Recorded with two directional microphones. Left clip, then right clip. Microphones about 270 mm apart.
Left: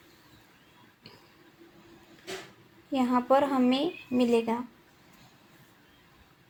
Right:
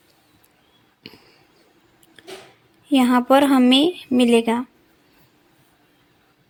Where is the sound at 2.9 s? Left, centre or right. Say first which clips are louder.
Right 9 dB; right.